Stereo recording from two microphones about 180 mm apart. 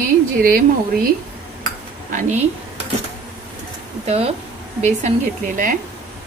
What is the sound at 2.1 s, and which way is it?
Speech, 40° right (ahead or behind).